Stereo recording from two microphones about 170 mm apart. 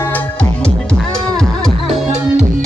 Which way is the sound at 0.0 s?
10° left (ahead or behind).